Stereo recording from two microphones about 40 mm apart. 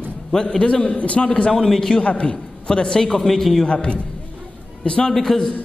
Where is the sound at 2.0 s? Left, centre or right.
Left.